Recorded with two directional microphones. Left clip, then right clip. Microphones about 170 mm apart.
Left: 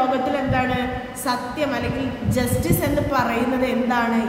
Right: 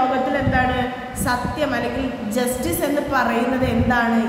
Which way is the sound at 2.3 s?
10° left (ahead or behind).